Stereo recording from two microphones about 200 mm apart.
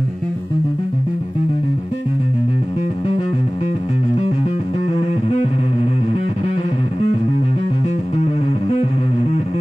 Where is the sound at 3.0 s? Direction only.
25° left (ahead or behind).